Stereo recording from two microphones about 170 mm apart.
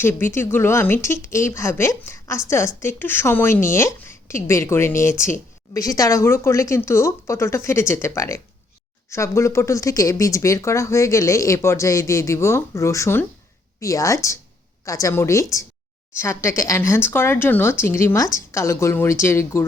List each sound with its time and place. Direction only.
0.0 s a woman's voice: 15° left (ahead or behind)